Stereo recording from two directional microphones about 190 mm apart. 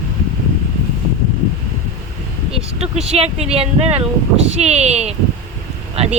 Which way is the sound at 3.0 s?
35° right (ahead or behind).